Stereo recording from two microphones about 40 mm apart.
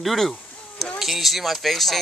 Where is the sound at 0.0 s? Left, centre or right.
Centre.